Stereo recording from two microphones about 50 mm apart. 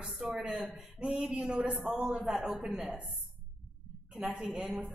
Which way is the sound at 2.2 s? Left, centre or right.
Centre.